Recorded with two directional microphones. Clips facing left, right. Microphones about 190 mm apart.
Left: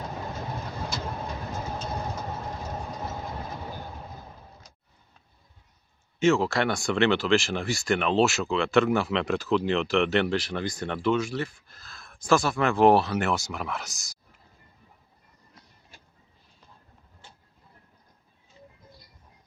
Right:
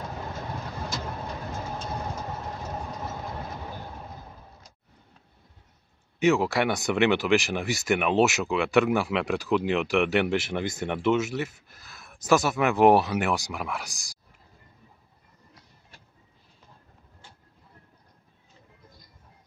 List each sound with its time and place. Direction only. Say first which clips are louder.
6.1 s speech: even; 15° right (ahead or behind)